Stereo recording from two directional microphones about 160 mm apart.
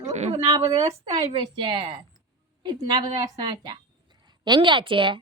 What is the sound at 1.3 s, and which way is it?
A woman's voice, 30° right (ahead or behind).